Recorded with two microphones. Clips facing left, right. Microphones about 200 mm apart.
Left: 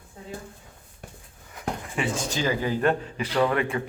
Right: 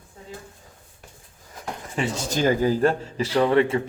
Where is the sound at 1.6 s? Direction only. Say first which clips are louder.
Right 1 dB; 40° right (ahead or behind).